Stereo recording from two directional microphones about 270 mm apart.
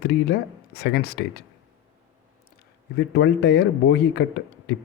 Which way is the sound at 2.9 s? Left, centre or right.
Left.